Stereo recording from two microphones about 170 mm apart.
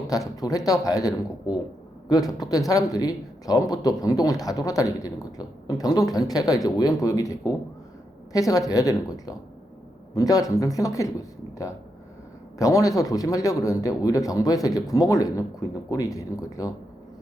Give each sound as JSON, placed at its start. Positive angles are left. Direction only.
{"t": 0.3, "sound": "a man's voice", "side_deg": 20}